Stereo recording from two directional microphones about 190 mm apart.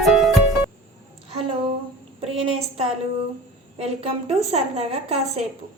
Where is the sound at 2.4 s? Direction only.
30° right (ahead or behind).